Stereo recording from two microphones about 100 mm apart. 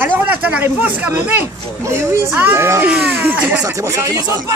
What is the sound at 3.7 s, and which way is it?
Speech, 30° right (ahead or behind).